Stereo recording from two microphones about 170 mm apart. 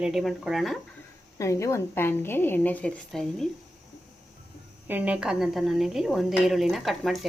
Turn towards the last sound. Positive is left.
turn(degrees=0)  # may be behind; listen again after turning